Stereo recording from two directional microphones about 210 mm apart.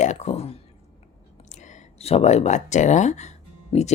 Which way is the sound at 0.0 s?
35° left (ahead or behind).